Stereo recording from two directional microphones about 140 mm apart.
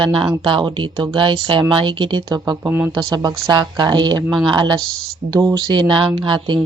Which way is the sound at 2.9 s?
25° right (ahead or behind).